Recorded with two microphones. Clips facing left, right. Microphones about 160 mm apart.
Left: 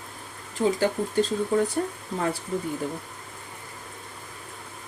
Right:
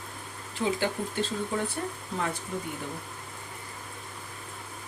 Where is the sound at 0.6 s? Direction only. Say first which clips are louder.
Left 5 dB; 40° left (ahead or behind).